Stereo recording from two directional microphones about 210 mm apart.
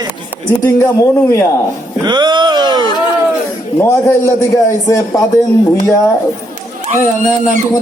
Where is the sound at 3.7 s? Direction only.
15° left (ahead or behind).